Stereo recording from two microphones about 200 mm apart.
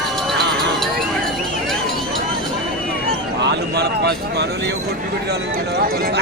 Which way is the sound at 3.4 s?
55° right (ahead or behind).